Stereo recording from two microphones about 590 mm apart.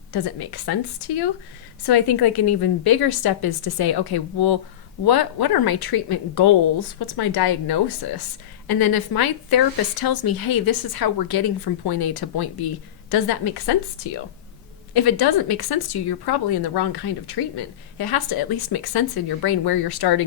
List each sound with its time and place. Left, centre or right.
0.1 s speech: left
14.9 s speech: left
17.9 s speech: left